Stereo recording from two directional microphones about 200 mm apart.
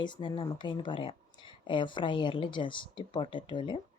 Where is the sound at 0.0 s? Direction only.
25° left (ahead or behind).